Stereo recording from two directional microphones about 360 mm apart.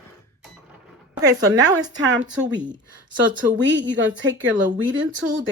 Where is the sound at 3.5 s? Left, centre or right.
Right.